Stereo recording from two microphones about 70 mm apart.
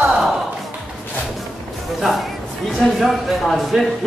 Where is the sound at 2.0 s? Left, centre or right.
Centre.